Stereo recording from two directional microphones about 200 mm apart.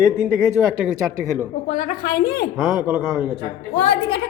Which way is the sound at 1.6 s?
40° left (ahead or behind).